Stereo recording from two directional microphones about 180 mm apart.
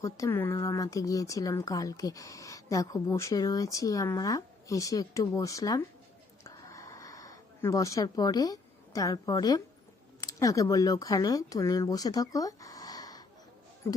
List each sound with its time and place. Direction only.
0.0 s speech: 15° left (ahead or behind)
6.4 s a sound: 20° left (ahead or behind)
10.2 s speech: 20° left (ahead or behind)